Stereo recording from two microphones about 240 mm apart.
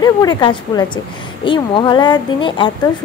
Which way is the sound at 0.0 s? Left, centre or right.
Centre.